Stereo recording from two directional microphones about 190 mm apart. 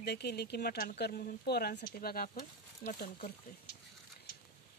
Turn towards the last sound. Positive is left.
turn(degrees=45)  # may be behind; listen again after turning